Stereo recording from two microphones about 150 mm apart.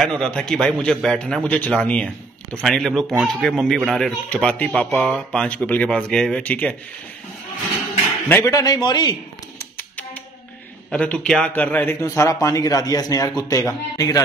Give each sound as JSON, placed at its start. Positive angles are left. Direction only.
{"t": 0.0, "sound": "a man's voice", "side_deg": 5}
{"t": 8.3, "sound": "a man's voice", "side_deg": 20}
{"t": 9.6, "sound": "music", "side_deg": 15}
{"t": 10.9, "sound": "a man's voice", "side_deg": 5}